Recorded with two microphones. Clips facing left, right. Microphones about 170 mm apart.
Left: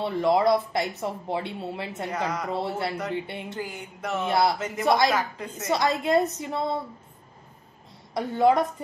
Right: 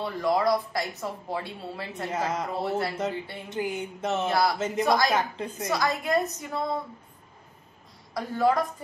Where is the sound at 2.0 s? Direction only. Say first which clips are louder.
Right 1 dB; 25° right (ahead or behind).